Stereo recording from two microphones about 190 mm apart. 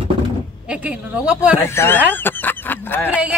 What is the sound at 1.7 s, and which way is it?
Speech, 10° left (ahead or behind).